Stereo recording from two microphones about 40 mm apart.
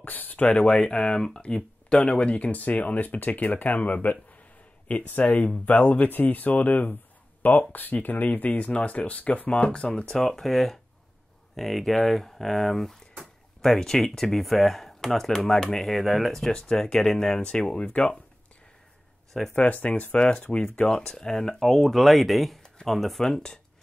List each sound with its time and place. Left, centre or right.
0.0 s a sound: left
0.5 s speech: left
6.0 s speech: left
9.5 s speech: left
10.2 s speech: centre
17.7 s speech: left
19.5 s speech: left
20.2 s speech: left
21.1 s speech: centre